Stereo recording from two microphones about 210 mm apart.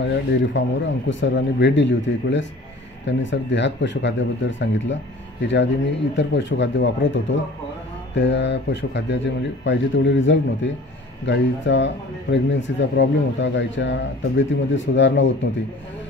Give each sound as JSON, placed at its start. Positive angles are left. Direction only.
{"t": 0.0, "sound": "speech", "side_deg": 60}
{"t": 6.1, "sound": "speech", "side_deg": 60}